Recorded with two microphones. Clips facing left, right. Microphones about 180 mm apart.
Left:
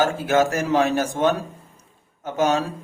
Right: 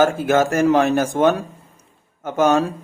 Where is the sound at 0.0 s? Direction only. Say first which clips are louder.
Right 3 dB; 50° right (ahead or behind).